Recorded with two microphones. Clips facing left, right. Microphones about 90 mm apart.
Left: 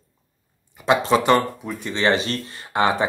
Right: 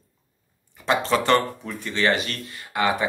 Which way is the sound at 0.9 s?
15° left (ahead or behind).